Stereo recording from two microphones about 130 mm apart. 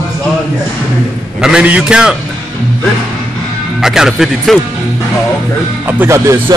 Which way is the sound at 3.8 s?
5° right (ahead or behind).